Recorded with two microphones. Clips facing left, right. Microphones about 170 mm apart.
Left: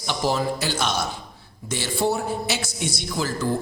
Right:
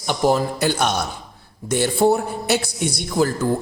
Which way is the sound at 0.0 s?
50° right (ahead or behind).